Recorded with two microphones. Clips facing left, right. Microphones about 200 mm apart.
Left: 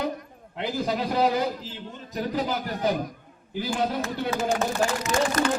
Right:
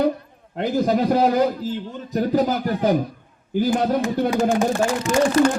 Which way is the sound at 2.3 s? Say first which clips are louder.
Right 8 dB; 45° right (ahead or behind).